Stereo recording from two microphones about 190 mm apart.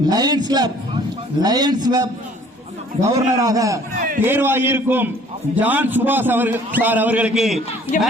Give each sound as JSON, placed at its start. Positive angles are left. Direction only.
{"t": 0.0, "sound": "a man's voice", "side_deg": -20}
{"t": 3.2, "sound": "a man's voice", "side_deg": -20}
{"t": 3.9, "sound": "a man's voice", "side_deg": -45}
{"t": 4.2, "sound": "a man's voice", "side_deg": -10}